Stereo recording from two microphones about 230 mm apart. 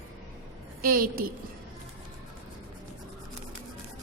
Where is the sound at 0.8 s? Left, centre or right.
Right.